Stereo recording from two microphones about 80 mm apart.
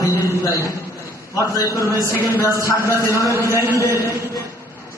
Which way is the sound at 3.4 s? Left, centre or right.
Left.